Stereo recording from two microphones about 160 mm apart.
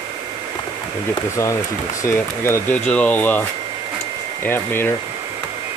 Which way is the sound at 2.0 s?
15° left (ahead or behind).